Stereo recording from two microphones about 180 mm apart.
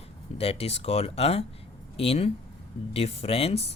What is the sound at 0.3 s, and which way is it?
Speech, 35° left (ahead or behind).